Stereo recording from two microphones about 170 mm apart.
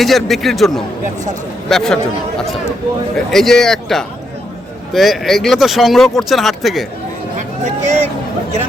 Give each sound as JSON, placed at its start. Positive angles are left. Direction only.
{"t": 0.0, "sound": "speech", "side_deg": 0}
{"t": 3.3, "sound": "speech", "side_deg": 0}
{"t": 7.9, "sound": "speech", "side_deg": -40}